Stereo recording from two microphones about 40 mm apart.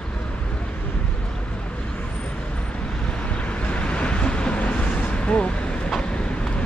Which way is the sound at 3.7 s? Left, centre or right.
Left.